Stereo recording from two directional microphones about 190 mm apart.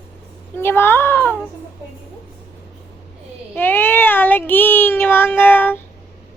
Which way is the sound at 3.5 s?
10° left (ahead or behind).